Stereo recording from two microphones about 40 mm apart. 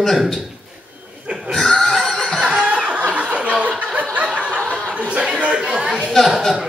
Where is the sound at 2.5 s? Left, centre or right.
Right.